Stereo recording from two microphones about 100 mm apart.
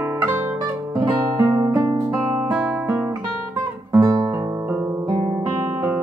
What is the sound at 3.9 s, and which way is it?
Guitar, 30° right (ahead or behind).